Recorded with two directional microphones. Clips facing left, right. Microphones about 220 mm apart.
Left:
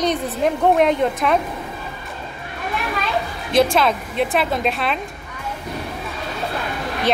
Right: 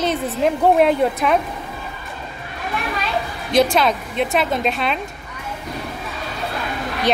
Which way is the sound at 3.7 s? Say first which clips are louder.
Even; centre (ahead or behind).